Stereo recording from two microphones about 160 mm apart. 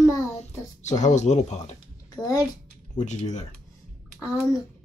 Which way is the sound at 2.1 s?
25° left (ahead or behind).